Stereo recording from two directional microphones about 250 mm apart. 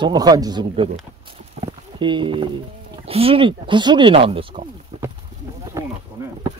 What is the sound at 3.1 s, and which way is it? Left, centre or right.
Speech, right.